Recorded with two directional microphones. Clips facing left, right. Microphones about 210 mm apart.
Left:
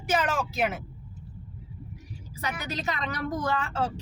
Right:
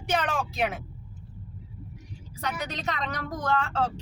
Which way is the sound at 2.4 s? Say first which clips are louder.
Even; 5° left (ahead or behind).